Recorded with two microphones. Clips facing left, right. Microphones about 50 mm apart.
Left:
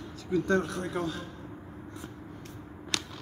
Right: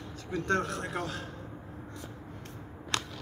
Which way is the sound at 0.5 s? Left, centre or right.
Right.